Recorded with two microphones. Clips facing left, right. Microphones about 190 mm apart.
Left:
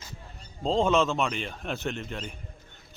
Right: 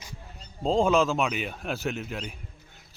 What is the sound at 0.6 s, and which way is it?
Speech, centre (ahead or behind).